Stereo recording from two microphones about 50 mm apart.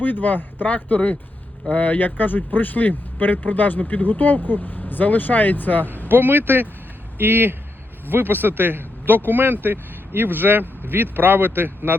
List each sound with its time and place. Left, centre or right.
0.0 s speech: left
6.1 s speech: right